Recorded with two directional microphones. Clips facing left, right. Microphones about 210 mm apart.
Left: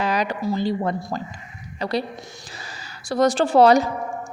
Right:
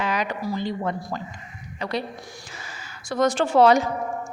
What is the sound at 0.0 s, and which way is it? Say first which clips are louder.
Speech: left 3 dB; 35° left (ahead or behind).